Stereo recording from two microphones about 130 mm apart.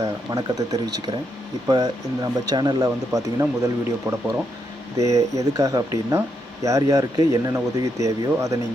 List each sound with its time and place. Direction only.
0.0 s speech: 30° right (ahead or behind)